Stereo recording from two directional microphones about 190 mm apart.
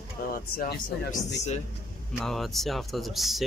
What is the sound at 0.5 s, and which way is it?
Speech, 55° left (ahead or behind).